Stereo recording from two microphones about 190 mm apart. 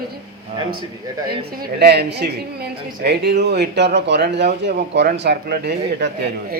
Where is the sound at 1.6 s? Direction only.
60° right (ahead or behind).